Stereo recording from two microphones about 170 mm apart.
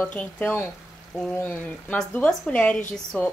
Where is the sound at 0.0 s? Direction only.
10° left (ahead or behind).